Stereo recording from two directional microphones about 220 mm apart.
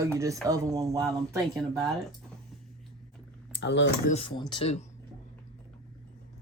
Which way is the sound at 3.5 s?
55° left (ahead or behind).